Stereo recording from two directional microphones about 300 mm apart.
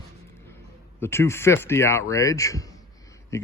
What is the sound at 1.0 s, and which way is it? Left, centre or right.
Speech, centre.